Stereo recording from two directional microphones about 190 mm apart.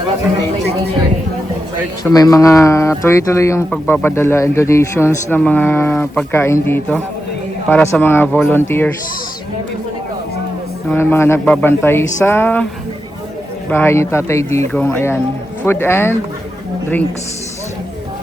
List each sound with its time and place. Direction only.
2.0 s speech: 20° left (ahead or behind)
10.9 s speech: 10° left (ahead or behind)
13.7 s speech: 10° left (ahead or behind)